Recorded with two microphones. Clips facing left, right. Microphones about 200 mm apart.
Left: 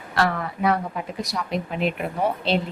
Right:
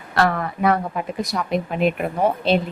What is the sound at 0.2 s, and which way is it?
A woman's voice, 55° right (ahead or behind).